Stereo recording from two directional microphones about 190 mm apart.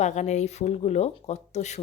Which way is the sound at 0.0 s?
35° left (ahead or behind).